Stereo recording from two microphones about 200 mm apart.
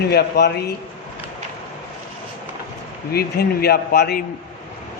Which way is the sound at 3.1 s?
50° left (ahead or behind).